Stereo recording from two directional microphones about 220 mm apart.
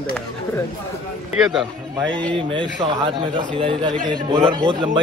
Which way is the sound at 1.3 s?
Centre (ahead or behind).